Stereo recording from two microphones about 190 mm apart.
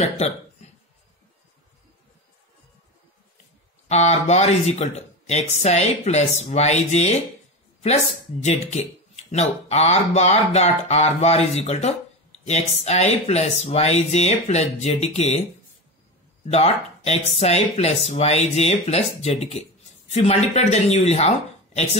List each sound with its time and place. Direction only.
0.0 s speech: 35° left (ahead or behind)
3.9 s speech: 35° left (ahead or behind)
16.4 s speech: 35° left (ahead or behind)